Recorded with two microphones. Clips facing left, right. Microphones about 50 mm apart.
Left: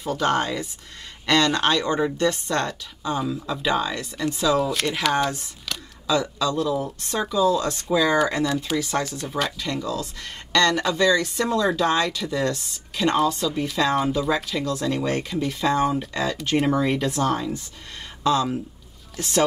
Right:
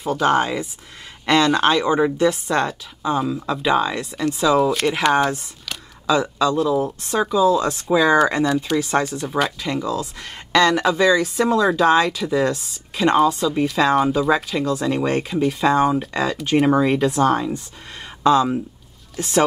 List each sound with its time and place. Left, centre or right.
0.2 s speech: centre
8.7 s speech: right
9.4 s speech: centre